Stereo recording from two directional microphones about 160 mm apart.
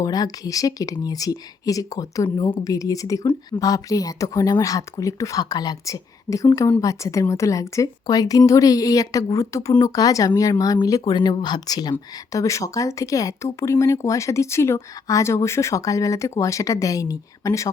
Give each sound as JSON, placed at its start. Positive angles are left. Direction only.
{"t": 0.0, "sound": "speech", "side_deg": 25}